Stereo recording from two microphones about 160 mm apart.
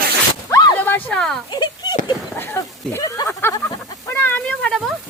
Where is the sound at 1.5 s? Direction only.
25° left (ahead or behind).